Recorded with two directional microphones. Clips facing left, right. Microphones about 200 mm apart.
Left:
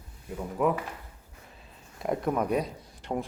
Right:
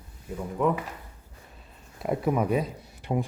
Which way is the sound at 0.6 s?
Centre (ahead or behind).